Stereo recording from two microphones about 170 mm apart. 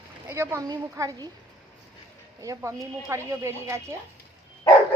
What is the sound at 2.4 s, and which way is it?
Speech, 20° right (ahead or behind).